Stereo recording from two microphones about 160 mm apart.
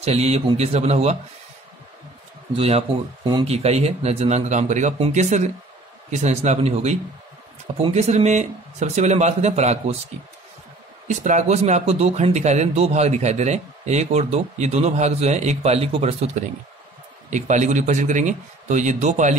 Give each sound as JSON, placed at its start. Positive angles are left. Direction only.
{"t": 0.0, "sound": "a man's voice", "side_deg": -40}
{"t": 2.5, "sound": "a man's voice", "side_deg": -35}
{"t": 11.1, "sound": "a man's voice", "side_deg": -50}